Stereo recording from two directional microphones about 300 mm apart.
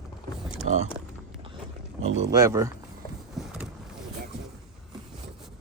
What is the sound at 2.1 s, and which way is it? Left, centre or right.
Speech, right.